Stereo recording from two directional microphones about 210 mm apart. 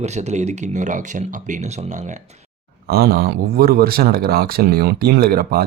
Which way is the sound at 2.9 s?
50° right (ahead or behind).